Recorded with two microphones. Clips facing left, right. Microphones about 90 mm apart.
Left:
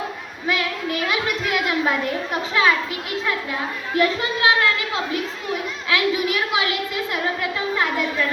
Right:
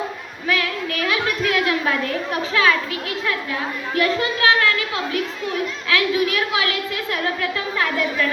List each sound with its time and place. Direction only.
0.4 s a woman's voice: 20° left (ahead or behind)
3.9 s a woman's voice: 20° left (ahead or behind)
5.9 s a woman's voice: 20° left (ahead or behind)